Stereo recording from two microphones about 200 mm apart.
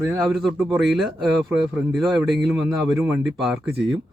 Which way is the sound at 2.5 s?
10° right (ahead or behind).